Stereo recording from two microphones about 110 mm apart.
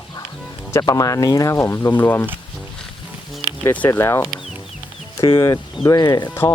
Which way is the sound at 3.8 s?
25° left (ahead or behind).